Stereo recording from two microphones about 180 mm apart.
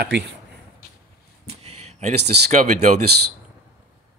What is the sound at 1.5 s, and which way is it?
Speech, 35° right (ahead or behind).